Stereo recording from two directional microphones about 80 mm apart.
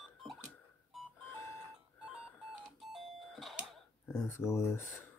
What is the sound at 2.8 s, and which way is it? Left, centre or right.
Doorbell, centre.